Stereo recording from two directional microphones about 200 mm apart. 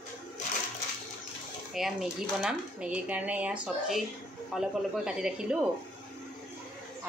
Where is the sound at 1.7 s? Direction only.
Centre (ahead or behind).